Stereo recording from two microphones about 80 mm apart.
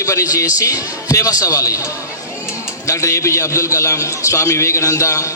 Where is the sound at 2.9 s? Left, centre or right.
Left.